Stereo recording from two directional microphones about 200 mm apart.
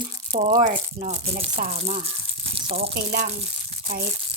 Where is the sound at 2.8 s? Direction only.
50° right (ahead or behind).